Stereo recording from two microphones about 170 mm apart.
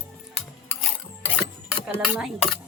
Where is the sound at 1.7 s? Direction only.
5° right (ahead or behind).